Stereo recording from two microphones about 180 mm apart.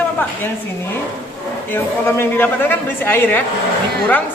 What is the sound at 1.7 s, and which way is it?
A woman's voice, 10° left (ahead or behind).